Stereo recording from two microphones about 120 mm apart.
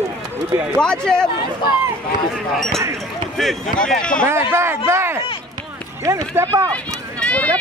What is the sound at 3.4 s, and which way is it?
Speech, centre (ahead or behind).